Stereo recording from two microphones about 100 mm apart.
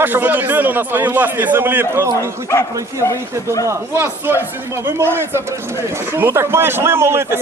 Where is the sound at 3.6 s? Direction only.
25° right (ahead or behind).